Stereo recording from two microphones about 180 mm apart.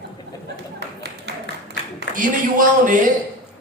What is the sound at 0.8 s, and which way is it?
Clapping, 65° right (ahead or behind).